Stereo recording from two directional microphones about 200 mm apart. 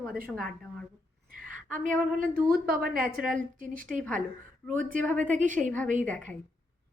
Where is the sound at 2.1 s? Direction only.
45° right (ahead or behind).